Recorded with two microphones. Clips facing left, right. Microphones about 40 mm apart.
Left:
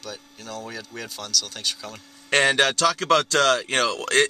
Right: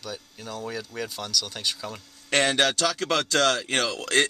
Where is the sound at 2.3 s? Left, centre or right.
Left.